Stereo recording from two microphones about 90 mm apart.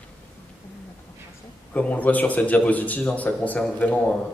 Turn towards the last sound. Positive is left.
turn(degrees=15)  # may be behind; listen again after turning